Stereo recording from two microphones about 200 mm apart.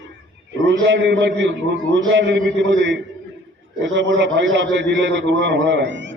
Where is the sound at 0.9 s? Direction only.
60° right (ahead or behind).